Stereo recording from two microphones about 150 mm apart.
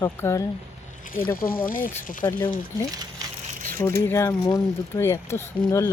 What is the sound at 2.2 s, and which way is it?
Speech, 15° left (ahead or behind).